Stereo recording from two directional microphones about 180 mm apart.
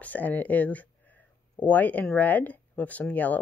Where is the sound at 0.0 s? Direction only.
10° left (ahead or behind).